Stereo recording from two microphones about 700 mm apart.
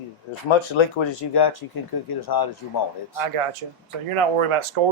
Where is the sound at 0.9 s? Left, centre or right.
Left.